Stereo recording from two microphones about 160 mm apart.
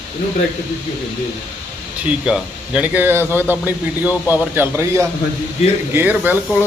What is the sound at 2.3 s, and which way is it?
Speech, 5° right (ahead or behind).